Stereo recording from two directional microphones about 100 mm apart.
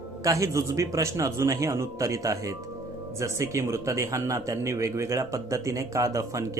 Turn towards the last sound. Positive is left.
turn(degrees=-30)  # may be behind; listen again after turning